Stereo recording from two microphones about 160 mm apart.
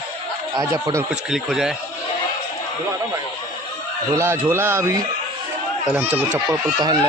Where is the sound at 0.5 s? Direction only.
20° right (ahead or behind).